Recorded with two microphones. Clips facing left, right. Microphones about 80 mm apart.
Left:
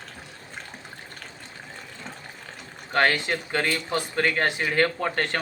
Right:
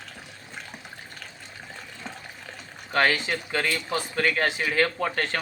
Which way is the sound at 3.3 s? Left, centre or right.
Left.